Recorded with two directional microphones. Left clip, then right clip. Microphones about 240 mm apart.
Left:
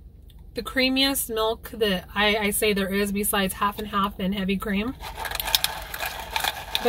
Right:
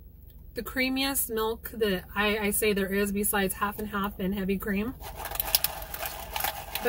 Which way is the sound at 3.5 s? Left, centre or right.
Centre.